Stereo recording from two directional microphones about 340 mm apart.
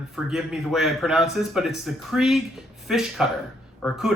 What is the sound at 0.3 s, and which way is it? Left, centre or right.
Speech, centre.